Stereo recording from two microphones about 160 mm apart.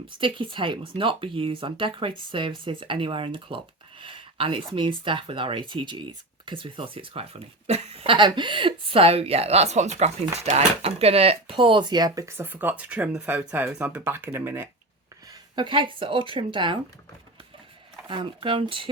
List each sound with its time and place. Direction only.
0.2 s speech: 30° right (ahead or behind); by 14.7 s 15° right (ahead or behind)
15.5 s speech: 30° right (ahead or behind)
18.1 s speech: 30° right (ahead or behind)